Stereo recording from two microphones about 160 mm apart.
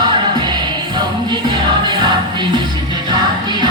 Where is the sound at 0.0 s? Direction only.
30° right (ahead or behind).